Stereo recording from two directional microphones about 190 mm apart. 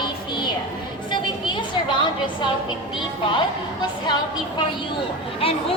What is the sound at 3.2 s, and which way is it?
A woman's voice, 25° left (ahead or behind).